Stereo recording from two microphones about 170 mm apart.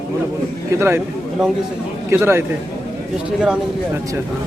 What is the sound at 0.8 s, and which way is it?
Speech, 15° right (ahead or behind).